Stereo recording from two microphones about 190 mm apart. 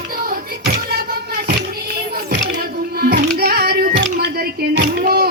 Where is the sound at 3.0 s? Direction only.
55° right (ahead or behind).